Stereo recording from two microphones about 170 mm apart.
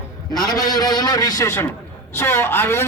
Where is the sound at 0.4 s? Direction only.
20° left (ahead or behind).